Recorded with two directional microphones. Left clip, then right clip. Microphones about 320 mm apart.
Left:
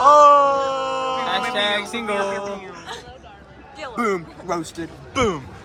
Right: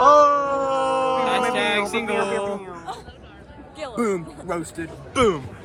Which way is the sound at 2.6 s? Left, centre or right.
Centre.